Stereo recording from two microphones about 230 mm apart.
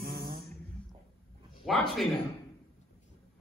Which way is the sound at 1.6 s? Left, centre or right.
Centre.